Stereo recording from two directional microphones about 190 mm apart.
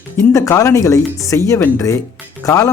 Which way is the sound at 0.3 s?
15° left (ahead or behind).